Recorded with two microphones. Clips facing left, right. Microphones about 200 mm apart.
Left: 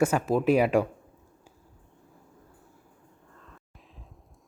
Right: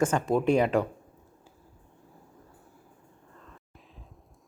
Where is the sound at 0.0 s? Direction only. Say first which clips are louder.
Left 1 dB; 5° left (ahead or behind).